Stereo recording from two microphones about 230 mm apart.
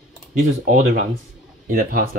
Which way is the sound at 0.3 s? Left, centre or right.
Right.